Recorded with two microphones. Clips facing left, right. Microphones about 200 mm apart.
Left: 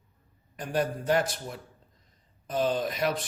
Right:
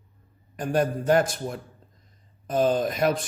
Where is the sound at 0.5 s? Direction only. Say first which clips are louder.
Right 5 dB; 50° right (ahead or behind).